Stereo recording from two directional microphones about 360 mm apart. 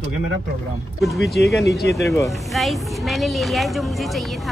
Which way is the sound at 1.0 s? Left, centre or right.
Centre.